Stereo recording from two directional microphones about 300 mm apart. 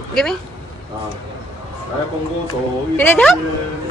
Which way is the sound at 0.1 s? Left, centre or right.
Centre.